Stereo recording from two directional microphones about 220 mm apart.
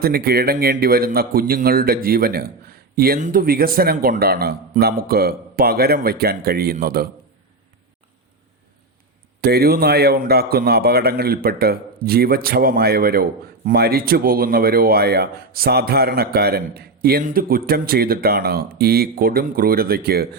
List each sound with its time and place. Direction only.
0.0 s speech: 45° right (ahead or behind)
9.4 s speech: 45° right (ahead or behind)